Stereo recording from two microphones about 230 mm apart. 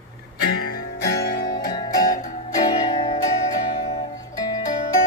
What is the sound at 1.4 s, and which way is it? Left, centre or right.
Music, centre.